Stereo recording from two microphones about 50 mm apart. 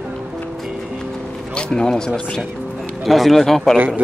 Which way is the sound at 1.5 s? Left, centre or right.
Centre.